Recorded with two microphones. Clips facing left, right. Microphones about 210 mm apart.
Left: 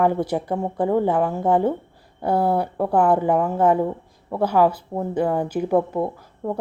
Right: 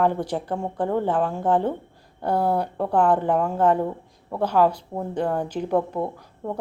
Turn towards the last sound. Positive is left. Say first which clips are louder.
# left 3 dB
turn(degrees=0)  # may be behind; listen again after turning